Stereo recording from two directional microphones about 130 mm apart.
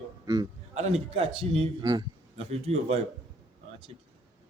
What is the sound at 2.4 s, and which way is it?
Speech, 50° right (ahead or behind).